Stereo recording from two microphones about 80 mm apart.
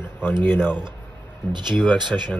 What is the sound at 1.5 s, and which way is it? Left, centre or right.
Speech, right.